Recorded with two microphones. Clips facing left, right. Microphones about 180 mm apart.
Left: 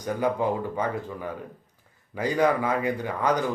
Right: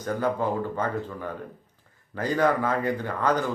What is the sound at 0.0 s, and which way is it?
Speech, 15° left (ahead or behind).